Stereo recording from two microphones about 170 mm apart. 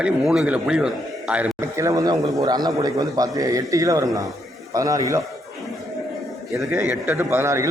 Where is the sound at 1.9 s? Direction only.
20° right (ahead or behind).